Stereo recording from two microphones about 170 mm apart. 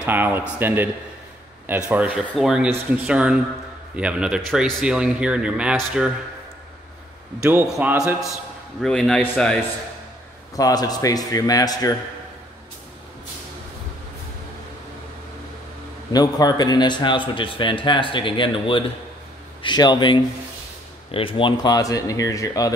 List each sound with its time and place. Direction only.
0.0 s a man's voice: 10° right (ahead or behind)
7.8 s speech: 10° right (ahead or behind)
8.8 s a man's voice: 5° left (ahead or behind)
10.5 s speech: 20° left (ahead or behind)
16.1 s speech: 25° left (ahead or behind)